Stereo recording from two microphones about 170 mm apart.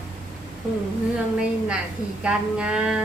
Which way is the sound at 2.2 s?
5° right (ahead or behind).